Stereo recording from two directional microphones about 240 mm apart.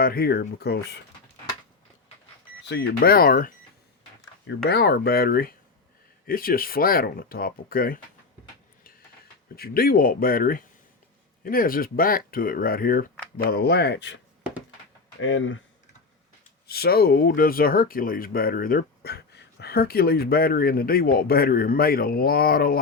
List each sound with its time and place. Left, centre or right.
0.0 s speech: left
2.6 s speech: left
9.6 s speech: left
15.2 s speech: left
16.6 s speech: left